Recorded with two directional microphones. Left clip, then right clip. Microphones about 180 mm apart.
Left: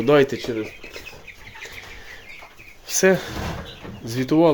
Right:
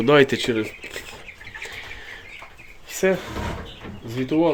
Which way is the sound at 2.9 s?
30° left (ahead or behind).